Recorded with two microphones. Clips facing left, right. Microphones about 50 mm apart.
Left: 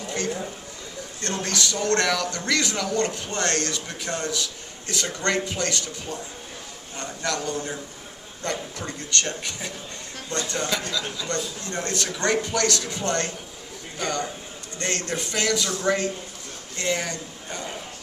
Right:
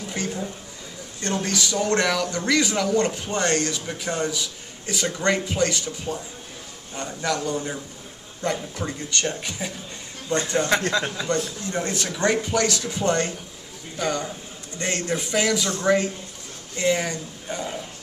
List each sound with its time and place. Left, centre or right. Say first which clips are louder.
1.2 s a man's voice: right 2 dB; centre
10.9 s a man's voice: right 5 dB; right
11.6 s a man's voice: right 2 dB; centre